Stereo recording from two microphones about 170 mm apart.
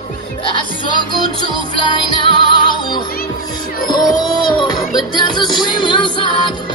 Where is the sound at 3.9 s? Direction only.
25° left (ahead or behind).